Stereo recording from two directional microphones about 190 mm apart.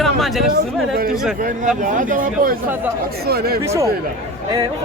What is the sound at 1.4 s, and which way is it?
Speech, 45° right (ahead or behind).